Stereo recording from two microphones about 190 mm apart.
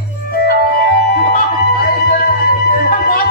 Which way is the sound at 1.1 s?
55° left (ahead or behind).